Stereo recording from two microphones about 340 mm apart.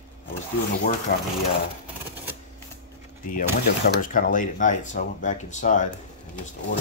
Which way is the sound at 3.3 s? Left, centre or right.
Left.